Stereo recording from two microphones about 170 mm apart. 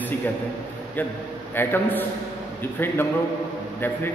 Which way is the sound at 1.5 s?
10° left (ahead or behind).